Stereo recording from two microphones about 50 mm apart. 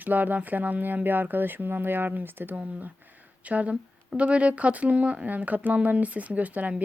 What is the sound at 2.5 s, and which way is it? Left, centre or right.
Speech, right.